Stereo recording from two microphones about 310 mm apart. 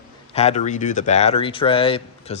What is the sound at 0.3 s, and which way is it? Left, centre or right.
Speech, left.